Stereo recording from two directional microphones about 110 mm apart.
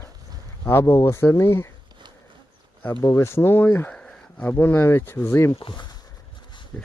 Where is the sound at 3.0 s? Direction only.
30° left (ahead or behind).